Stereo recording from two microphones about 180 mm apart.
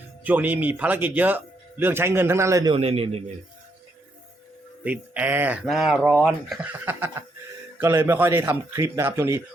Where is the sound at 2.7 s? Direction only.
30° right (ahead or behind).